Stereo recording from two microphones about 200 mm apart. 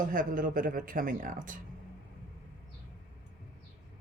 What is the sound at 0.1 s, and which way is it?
Speech, 45° right (ahead or behind).